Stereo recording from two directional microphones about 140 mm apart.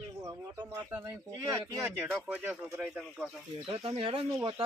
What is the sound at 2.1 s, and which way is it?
Speech, 15° right (ahead or behind).